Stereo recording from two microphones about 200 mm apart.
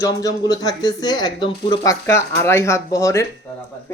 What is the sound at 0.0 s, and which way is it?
Speech, 20° left (ahead or behind).